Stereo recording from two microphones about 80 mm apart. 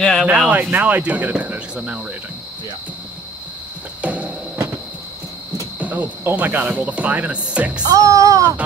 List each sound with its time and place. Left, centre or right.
0.0 s a sound: centre
0.3 s speech: centre
0.6 s speech: right
4.0 s a sound: centre
5.8 s cricket: centre
6.2 s speech: right
7.8 s speech: right